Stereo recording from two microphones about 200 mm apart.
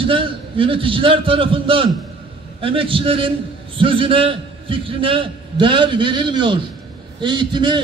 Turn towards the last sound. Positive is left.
turn(degrees=-25)  # may be behind; listen again after turning